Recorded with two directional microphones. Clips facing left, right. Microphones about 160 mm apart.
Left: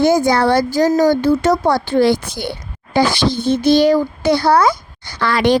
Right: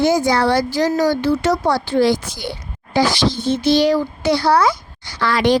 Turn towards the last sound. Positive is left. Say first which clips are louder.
# left 1 dB
turn(degrees=60)  # may be behind; listen again after turning